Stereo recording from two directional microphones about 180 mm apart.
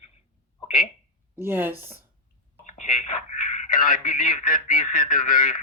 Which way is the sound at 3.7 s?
50° left (ahead or behind).